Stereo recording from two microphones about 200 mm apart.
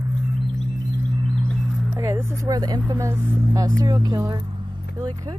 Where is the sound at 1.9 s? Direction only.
15° right (ahead or behind).